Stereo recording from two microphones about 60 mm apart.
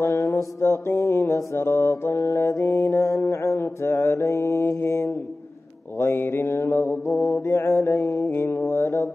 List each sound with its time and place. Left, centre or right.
0.0 s music: left
1.3 s mantra: left
2.9 s mantra: left